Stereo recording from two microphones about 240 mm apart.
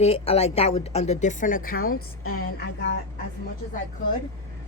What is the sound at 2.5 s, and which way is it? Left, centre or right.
Speech, left.